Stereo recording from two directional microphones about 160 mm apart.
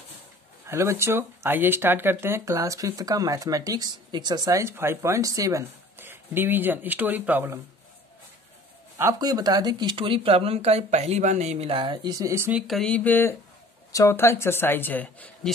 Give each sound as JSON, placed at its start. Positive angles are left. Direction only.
{"t": 0.7, "sound": "speech", "side_deg": -20}
{"t": 8.9, "sound": "speech", "side_deg": -20}
{"t": 12.5, "sound": "speech", "side_deg": 0}